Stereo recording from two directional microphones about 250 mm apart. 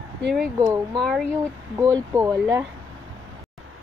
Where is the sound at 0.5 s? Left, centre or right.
Centre.